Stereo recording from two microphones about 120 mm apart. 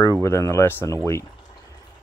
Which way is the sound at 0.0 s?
25° left (ahead or behind).